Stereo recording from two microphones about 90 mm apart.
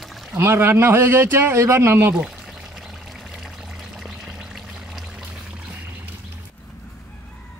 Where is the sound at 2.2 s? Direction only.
5° right (ahead or behind).